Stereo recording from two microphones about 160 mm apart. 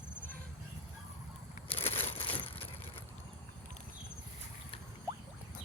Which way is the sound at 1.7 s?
40° left (ahead or behind).